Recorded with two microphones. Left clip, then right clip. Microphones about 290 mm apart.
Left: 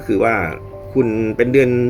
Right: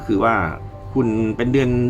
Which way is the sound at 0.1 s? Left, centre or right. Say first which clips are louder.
Left 2 dB; centre.